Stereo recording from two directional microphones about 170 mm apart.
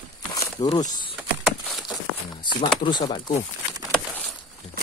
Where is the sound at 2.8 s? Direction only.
25° left (ahead or behind).